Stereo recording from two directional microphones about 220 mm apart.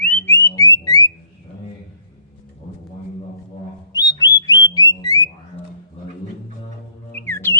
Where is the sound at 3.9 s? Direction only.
15° left (ahead or behind).